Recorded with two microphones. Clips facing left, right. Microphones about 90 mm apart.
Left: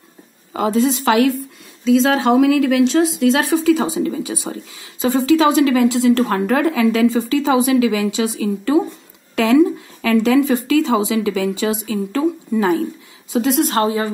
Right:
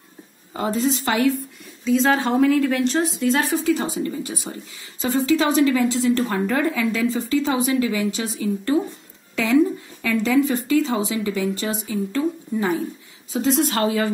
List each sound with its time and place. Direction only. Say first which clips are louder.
0.6 s speech: left 5 dB; 90° left
9.3 s a woman's voice: left 5 dB; 75° left (ahead or behind); by 12.8 s 90° left
13.3 s a woman's voice: left 4 dB; 65° left (ahead or behind)
13.7 s a woman's voice: left 3 dB; 35° left (ahead or behind)